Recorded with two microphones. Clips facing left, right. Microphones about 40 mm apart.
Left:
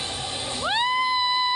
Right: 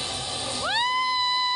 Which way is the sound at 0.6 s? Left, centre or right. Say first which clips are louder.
Left 2 dB; centre.